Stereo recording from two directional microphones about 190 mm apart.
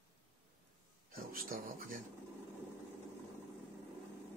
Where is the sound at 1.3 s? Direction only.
50° right (ahead or behind).